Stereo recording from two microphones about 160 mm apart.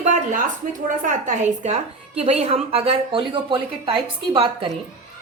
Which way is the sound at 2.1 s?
40° right (ahead or behind).